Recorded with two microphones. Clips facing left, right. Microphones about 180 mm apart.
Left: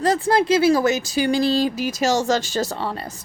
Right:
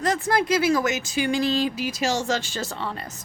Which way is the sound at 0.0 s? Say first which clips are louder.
Left 5 dB; 30° left (ahead or behind).